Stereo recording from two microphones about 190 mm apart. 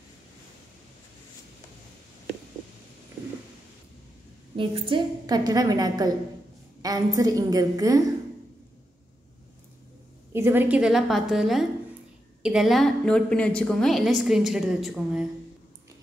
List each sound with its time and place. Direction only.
4.6 s a woman's voice: 25° right (ahead or behind)
10.3 s a woman's voice: 10° right (ahead or behind)